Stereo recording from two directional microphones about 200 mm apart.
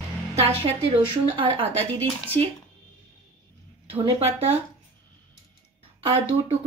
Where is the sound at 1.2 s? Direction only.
25° right (ahead or behind).